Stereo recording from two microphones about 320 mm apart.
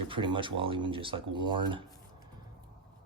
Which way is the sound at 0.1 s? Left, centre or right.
Centre.